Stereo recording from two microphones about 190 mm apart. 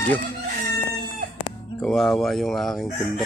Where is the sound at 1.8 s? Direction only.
Centre (ahead or behind).